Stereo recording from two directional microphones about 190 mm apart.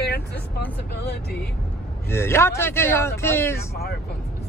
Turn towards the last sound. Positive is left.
turn(degrees=15)  # may be behind; listen again after turning